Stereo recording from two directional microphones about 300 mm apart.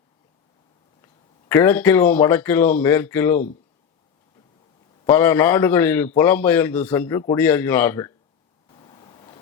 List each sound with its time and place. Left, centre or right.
1.0 s speech: centre
5.0 s a man's voice: centre
8.8 s waves: centre